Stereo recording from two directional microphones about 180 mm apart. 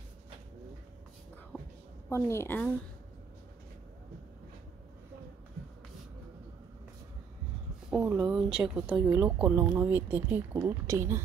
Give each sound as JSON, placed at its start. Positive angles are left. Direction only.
{"t": 2.0, "sound": "a woman's voice", "side_deg": 15}
{"t": 7.9, "sound": "speech", "side_deg": -5}